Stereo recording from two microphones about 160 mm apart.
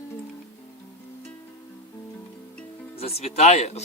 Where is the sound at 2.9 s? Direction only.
40° left (ahead or behind).